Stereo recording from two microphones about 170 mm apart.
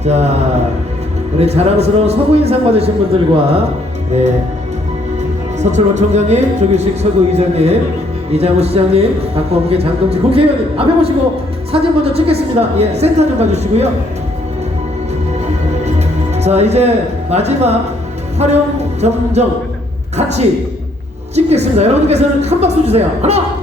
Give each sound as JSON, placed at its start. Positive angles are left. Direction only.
{"t": 0.0, "sound": "a man's voice", "side_deg": -40}
{"t": 1.4, "sound": "a man's voice", "side_deg": -40}
{"t": 5.5, "sound": "a man's voice", "side_deg": -45}
{"t": 15.8, "sound": "music", "side_deg": -40}
{"t": 17.3, "sound": "a man's voice", "side_deg": -40}